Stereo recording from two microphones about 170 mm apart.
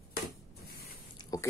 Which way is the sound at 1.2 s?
25° left (ahead or behind).